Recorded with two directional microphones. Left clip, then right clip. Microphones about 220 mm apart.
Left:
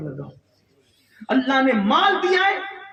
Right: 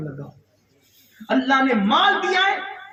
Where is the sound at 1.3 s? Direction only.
50° left (ahead or behind).